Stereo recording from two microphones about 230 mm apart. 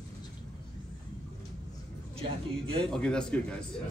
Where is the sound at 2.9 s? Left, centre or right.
Centre.